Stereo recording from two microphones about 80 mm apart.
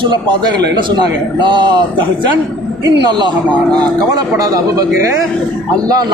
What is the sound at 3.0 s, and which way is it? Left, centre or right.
Speech, right.